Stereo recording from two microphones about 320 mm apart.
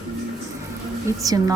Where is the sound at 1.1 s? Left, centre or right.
Centre.